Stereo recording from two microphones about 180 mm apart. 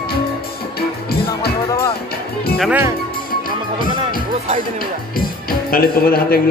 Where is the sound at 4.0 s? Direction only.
35° right (ahead or behind).